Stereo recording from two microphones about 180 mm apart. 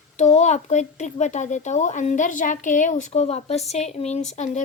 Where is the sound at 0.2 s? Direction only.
40° left (ahead or behind).